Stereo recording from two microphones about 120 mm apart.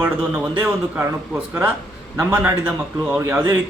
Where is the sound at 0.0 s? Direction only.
10° right (ahead or behind).